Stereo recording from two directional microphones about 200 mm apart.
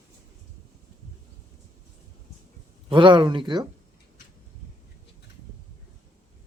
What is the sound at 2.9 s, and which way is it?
Speech, 25° right (ahead or behind).